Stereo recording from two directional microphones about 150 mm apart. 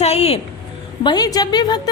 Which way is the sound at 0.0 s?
45° left (ahead or behind).